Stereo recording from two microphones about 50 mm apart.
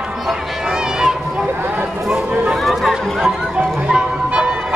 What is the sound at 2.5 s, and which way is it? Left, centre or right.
Chatter, centre.